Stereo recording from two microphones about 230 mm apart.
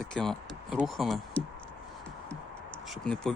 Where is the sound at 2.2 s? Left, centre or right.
Centre.